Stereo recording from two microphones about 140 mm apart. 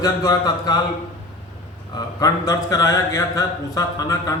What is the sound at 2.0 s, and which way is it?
Speech, 25° left (ahead or behind).